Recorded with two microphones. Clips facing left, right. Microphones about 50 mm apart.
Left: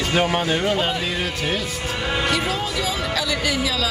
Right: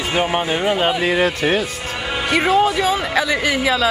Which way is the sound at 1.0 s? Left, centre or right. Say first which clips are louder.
Right 8 dB; right.